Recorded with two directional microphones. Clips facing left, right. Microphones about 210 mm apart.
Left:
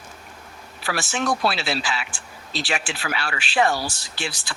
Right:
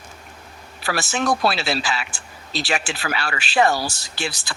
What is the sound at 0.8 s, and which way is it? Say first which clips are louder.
Speech: right 2 dB; 40° right (ahead or behind).